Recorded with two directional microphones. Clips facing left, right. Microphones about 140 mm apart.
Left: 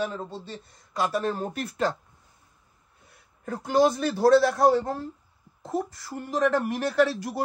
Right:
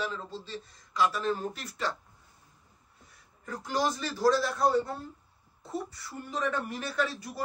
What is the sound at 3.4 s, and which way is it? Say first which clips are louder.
A man's voice: left 9 dB; 60° left (ahead or behind).